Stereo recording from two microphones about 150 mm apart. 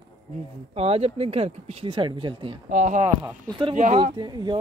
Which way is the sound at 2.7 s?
55° right (ahead or behind).